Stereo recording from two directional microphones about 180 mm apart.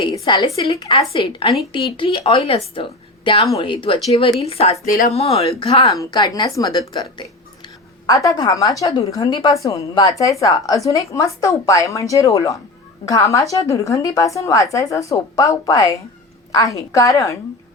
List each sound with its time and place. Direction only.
0.0 s a woman's voice: 25° left (ahead or behind)
4.9 s speech: 50° left (ahead or behind)
5.1 s a woman's voice: 35° left (ahead or behind)
5.9 s a woman's voice: 20° left (ahead or behind)